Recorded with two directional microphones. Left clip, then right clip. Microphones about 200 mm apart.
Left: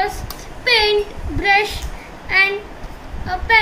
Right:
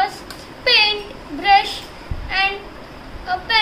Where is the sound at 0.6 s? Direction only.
25° right (ahead or behind).